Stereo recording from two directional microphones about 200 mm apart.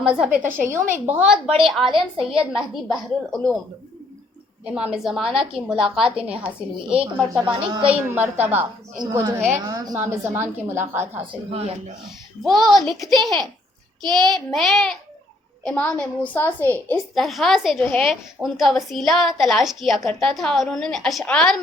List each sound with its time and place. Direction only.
0.0 s a woman's voice: 5° right (ahead or behind)
4.6 s a woman's voice: 5° right (ahead or behind)
7.4 s speech: 25° right (ahead or behind)
7.9 s a woman's voice: 10° right (ahead or behind)
11.3 s speech: 25° right (ahead or behind)
12.4 s a woman's voice: centre (ahead or behind)